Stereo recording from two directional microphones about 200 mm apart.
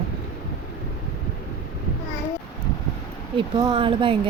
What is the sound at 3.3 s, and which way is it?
Speech, 25° right (ahead or behind).